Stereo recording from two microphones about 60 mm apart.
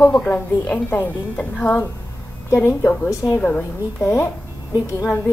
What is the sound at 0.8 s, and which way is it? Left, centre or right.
Speech, left.